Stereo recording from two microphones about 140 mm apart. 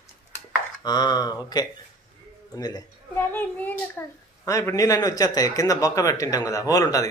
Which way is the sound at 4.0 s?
15° left (ahead or behind).